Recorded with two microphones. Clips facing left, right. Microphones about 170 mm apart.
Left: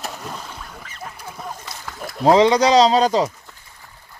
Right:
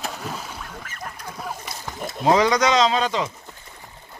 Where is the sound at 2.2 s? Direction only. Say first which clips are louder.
Left 4 dB; 25° left (ahead or behind).